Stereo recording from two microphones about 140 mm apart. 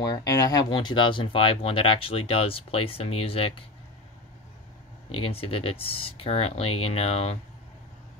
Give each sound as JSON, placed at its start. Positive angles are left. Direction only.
{"t": 0.0, "sound": "speech", "side_deg": 30}
{"t": 5.2, "sound": "speech", "side_deg": 40}